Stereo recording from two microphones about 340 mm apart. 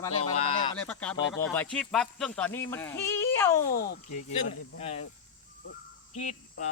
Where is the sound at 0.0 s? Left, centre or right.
Centre.